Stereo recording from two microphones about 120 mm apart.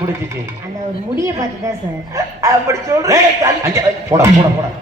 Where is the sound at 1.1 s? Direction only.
25° right (ahead or behind).